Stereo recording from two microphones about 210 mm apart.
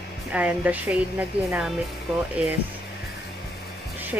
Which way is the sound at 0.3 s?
5° right (ahead or behind).